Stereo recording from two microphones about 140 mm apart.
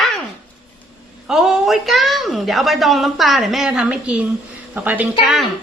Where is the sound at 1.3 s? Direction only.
5° right (ahead or behind).